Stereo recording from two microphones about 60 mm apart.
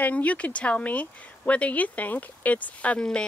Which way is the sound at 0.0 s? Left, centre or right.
Left.